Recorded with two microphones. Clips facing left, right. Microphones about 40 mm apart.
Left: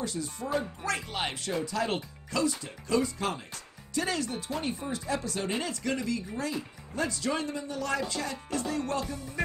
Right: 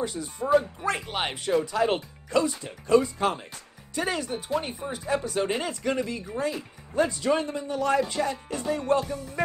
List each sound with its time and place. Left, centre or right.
0.0 s speech: centre